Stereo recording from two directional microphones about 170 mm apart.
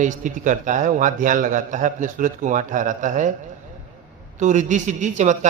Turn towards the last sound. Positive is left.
turn(degrees=-45)  # may be behind; listen again after turning